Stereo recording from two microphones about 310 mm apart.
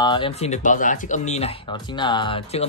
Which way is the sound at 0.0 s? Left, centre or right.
Centre.